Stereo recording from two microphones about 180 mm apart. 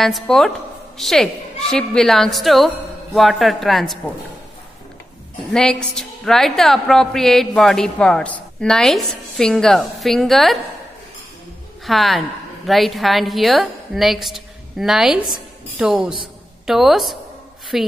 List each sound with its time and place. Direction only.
0.0 s a woman's voice: centre (ahead or behind)
5.5 s a woman's voice: 5° left (ahead or behind)
11.8 s a woman's voice: centre (ahead or behind)